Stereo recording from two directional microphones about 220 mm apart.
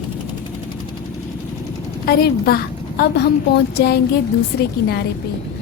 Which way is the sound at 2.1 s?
45° left (ahead or behind).